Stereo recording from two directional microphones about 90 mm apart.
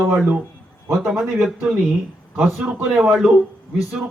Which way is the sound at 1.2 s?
20° right (ahead or behind).